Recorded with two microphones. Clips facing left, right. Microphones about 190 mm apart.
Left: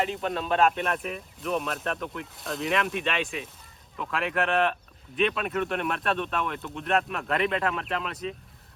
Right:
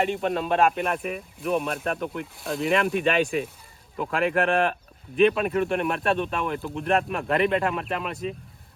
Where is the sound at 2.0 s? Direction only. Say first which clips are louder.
Right 4 dB; centre (ahead or behind).